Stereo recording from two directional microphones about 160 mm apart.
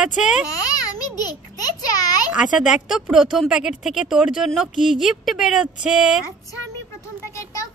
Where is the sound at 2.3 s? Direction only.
5° right (ahead or behind).